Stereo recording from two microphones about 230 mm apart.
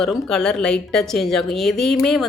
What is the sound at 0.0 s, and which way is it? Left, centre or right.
A woman's voice, centre.